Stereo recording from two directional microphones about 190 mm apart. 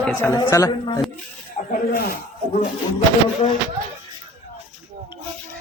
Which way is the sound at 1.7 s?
50° left (ahead or behind).